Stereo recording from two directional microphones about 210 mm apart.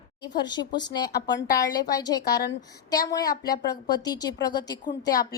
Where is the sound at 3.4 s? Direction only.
20° left (ahead or behind).